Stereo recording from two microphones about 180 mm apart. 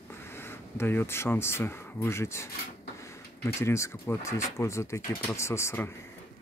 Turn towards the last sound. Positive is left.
turn(degrees=15)  # may be behind; listen again after turning